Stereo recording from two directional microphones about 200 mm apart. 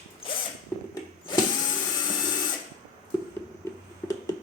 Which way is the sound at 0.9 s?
20° left (ahead or behind).